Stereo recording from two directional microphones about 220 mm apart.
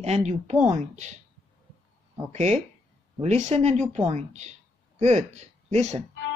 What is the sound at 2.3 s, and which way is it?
Speech, 30° right (ahead or behind).